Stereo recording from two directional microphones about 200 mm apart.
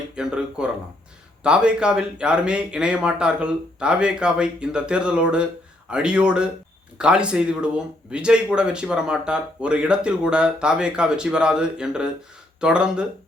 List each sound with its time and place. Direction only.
0.2 s speech: 5° right (ahead or behind)